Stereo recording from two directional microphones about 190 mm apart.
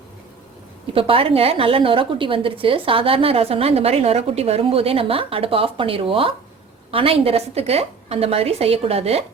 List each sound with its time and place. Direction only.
0.9 s a woman's voice: 30° right (ahead or behind)